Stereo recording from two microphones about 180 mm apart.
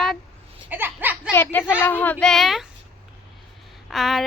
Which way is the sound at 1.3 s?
15° left (ahead or behind).